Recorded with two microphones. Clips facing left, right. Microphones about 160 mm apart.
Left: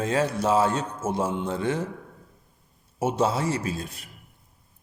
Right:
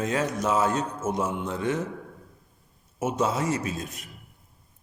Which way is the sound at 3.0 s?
30° left (ahead or behind).